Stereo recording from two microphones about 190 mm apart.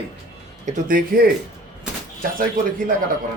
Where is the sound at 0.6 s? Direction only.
45° right (ahead or behind).